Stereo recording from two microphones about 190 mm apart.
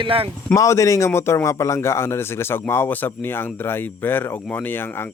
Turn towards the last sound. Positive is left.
turn(degrees=10)  # may be behind; listen again after turning